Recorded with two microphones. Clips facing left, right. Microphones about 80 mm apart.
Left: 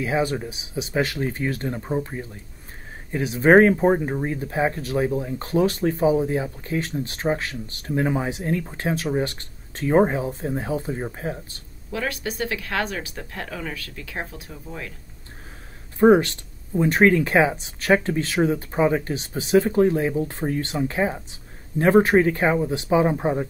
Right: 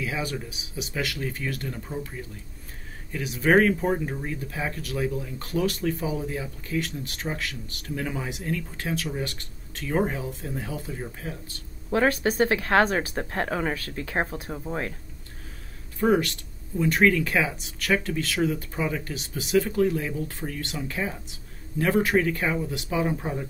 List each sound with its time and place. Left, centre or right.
0.0 s speech: left
11.9 s speech: right
16.0 s speech: left